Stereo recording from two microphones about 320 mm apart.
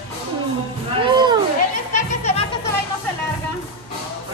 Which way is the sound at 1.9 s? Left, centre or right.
Centre.